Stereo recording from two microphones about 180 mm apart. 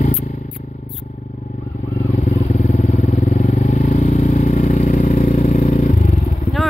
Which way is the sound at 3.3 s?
40° left (ahead or behind).